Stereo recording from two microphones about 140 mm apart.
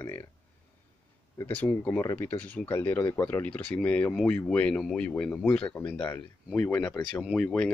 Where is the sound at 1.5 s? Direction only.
10° left (ahead or behind).